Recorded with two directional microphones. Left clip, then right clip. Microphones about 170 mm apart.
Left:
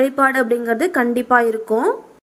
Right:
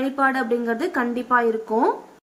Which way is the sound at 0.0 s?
25° left (ahead or behind).